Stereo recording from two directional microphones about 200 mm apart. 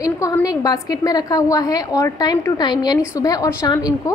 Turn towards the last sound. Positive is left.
turn(degrees=20)  # may be behind; listen again after turning